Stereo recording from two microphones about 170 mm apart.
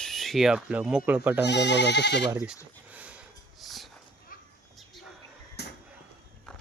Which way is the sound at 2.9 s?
10° right (ahead or behind).